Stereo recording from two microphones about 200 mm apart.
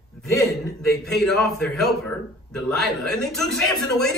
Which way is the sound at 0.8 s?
Centre (ahead or behind).